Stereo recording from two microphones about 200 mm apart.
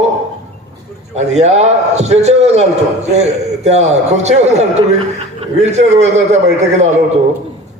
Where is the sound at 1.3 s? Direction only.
35° right (ahead or behind).